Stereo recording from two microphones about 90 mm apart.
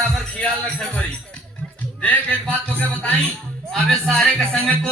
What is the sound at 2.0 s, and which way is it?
Music, 15° left (ahead or behind).